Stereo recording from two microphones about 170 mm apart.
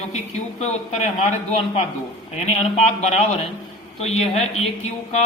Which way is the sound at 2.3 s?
40° left (ahead or behind).